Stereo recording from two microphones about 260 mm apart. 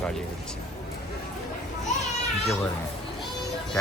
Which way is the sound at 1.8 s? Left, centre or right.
Left.